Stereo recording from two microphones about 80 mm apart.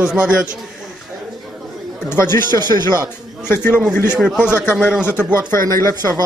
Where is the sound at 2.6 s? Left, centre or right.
Right.